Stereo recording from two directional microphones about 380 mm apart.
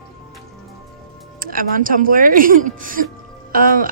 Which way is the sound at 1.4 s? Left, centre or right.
Right.